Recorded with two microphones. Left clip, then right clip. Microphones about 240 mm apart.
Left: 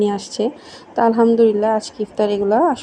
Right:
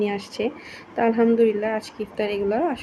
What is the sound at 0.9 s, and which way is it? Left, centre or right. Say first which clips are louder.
Speech: left 6 dB; centre.